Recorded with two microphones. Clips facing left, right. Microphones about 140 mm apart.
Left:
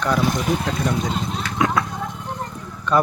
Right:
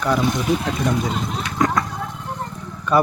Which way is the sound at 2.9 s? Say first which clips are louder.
Right 1 dB; 10° right (ahead or behind).